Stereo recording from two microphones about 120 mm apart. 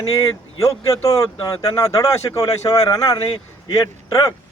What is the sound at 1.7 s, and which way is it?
Speech, 30° left (ahead or behind).